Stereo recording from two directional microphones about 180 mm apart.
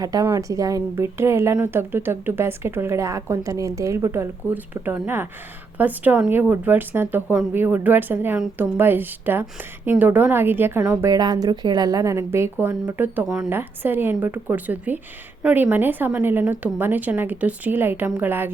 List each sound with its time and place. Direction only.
0.0 s speech: 20° right (ahead or behind)